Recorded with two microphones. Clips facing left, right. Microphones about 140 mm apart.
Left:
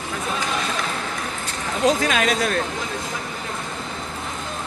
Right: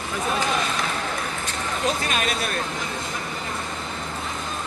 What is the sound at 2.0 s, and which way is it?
Speech, 90° left.